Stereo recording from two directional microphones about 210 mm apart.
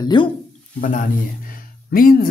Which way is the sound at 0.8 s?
40° left (ahead or behind).